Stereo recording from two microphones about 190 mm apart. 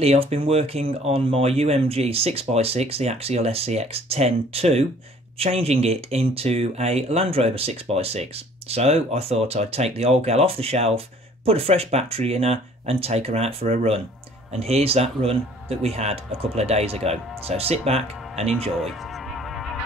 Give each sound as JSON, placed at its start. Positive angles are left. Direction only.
{"t": 0.0, "sound": "speech", "side_deg": -30}
{"t": 18.8, "sound": "music", "side_deg": 0}